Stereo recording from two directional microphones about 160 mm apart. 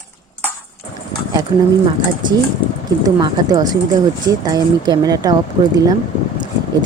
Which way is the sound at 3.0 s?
25° right (ahead or behind).